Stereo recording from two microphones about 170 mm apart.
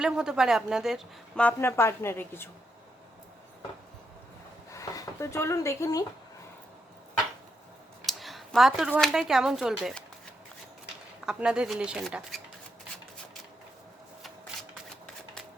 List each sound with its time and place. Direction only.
0.0 s speech: 5° right (ahead or behind)
1.5 s a woman's voice: 15° left (ahead or behind)
4.7 s speech: 20° left (ahead or behind)
8.0 s speech: centre (ahead or behind)
11.3 s speech: 5° right (ahead or behind)